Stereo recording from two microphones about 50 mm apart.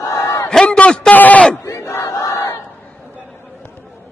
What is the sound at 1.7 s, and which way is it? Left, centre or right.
Crowd, left.